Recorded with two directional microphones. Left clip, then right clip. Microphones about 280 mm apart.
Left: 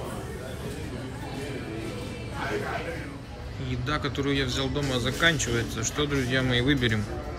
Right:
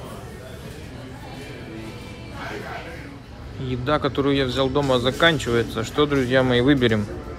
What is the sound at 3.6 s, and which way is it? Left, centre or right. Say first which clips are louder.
A man's voice: right 8 dB; right.